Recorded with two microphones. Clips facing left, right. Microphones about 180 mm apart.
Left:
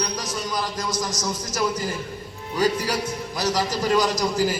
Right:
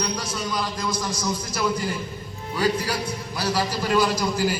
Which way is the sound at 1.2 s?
40° left (ahead or behind).